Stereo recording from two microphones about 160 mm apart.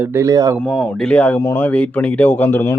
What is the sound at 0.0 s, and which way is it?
Speech, 15° right (ahead or behind).